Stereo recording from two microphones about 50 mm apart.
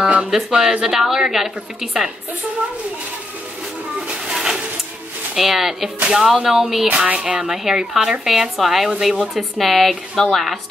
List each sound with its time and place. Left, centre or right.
0.0 s music: right
0.5 s a woman's voice: centre
4.3 s a sound: centre
5.3 s a woman's voice: centre
6.9 s speech: right
7.4 s a woman's voice: centre